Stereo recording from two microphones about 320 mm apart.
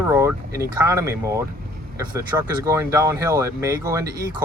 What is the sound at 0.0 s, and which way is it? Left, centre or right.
Speech, centre.